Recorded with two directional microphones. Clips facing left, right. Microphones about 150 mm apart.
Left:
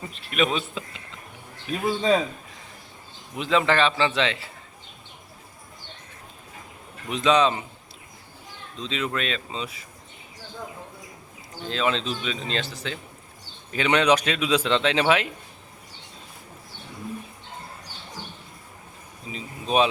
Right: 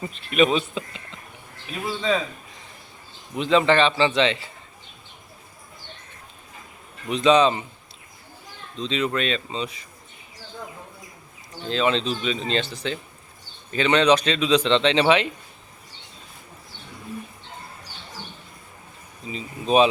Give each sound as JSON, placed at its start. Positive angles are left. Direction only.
{"t": 0.0, "sound": "speech", "side_deg": 0}
{"t": 1.9, "sound": "speech", "side_deg": 40}
{"t": 3.3, "sound": "speech", "side_deg": 0}
{"t": 7.1, "sound": "speech", "side_deg": 0}
{"t": 8.8, "sound": "speech", "side_deg": 0}
{"t": 11.7, "sound": "speech", "side_deg": 0}
{"t": 19.3, "sound": "speech", "side_deg": 0}